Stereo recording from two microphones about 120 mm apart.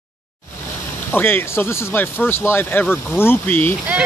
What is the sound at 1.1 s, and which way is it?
Speech, 15° left (ahead or behind).